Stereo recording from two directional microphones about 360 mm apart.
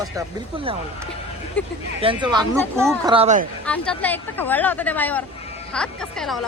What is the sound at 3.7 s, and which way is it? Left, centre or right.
Speech, centre.